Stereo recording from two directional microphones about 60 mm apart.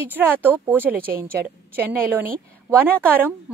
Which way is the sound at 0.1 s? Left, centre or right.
Right.